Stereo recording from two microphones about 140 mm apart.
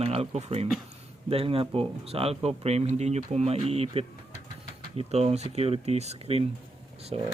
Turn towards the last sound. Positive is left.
turn(degrees=-45)  # may be behind; listen again after turning